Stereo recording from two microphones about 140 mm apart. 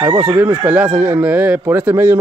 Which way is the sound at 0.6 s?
10° right (ahead or behind).